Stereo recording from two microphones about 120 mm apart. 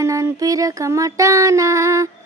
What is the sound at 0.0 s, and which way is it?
Child singing, 25° right (ahead or behind).